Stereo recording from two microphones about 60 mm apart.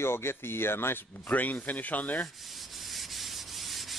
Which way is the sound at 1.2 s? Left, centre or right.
Left.